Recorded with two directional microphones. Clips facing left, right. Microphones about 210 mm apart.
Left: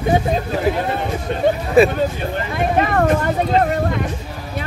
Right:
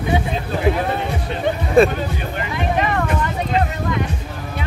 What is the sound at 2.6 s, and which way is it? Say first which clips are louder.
Music: left 4 dB; 45° left (ahead or behind).